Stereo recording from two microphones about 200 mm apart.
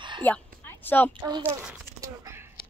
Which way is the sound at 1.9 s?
15° right (ahead or behind).